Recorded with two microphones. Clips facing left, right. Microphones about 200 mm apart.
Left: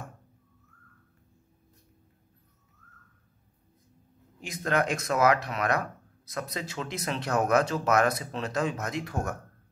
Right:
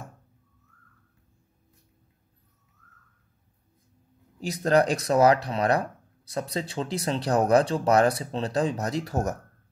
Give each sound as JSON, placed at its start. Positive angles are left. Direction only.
{"t": 4.4, "sound": "speech", "side_deg": -35}